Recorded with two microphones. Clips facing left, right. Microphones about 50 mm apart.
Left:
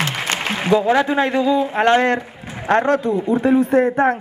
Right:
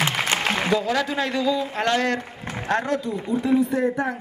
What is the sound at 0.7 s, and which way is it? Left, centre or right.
A man's voice, left.